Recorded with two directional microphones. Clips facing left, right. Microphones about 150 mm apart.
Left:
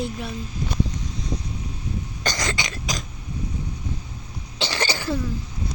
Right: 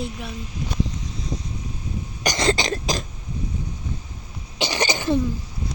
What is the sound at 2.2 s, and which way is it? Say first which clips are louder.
Cough: right 4 dB; 15° right (ahead or behind).